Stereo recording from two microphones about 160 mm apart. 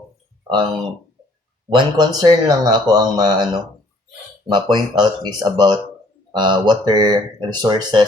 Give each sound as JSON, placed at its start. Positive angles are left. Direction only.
{"t": 1.7, "sound": "speech", "side_deg": -30}
{"t": 4.4, "sound": "speech", "side_deg": -25}